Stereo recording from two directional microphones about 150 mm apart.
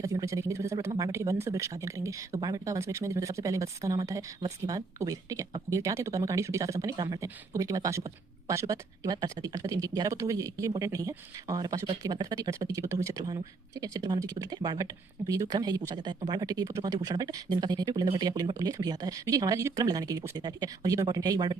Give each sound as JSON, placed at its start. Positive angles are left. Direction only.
{"t": 0.0, "sound": "speech", "side_deg": -20}